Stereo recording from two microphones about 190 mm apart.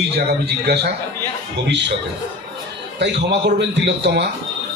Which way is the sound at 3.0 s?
65° right (ahead or behind).